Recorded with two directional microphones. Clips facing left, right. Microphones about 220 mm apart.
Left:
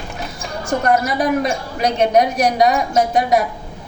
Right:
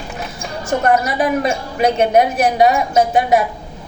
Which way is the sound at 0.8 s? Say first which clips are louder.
Right 1 dB; 5° right (ahead or behind).